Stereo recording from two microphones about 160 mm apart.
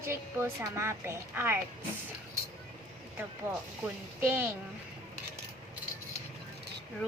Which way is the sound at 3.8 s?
15° right (ahead or behind).